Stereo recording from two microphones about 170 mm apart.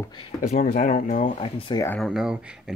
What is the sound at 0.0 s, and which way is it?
Speech, 25° left (ahead or behind).